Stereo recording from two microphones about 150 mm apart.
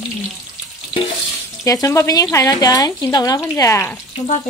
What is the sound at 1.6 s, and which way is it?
Speech, 20° left (ahead or behind).